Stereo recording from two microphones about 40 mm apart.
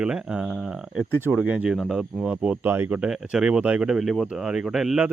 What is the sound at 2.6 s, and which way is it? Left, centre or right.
Speech, right.